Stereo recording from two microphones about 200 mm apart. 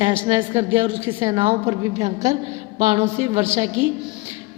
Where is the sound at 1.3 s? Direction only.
25° right (ahead or behind).